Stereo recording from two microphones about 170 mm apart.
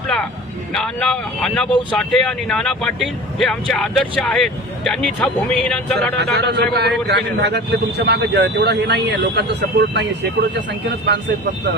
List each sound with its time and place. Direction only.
0.7 s speech: 5° left (ahead or behind)
6.1 s a man's voice: 75° right (ahead or behind); by 11.2 s 90° right